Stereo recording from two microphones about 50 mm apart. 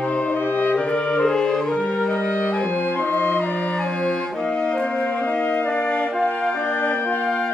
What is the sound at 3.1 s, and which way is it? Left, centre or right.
Music, left.